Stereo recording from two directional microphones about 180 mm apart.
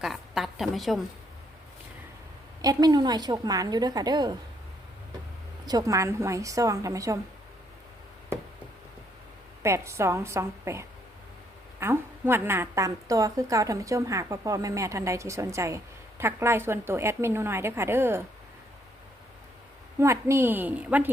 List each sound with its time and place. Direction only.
0.0 s a woman's voice: centre (ahead or behind)
2.6 s a woman's voice: 20° right (ahead or behind)
5.6 s a woman's voice: 20° right (ahead or behind)
9.6 s a woman's voice: 15° right (ahead or behind)
20.0 s a woman's voice: 15° right (ahead or behind)